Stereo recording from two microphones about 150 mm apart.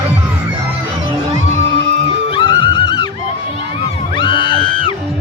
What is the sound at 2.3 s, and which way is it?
Music, 35° left (ahead or behind).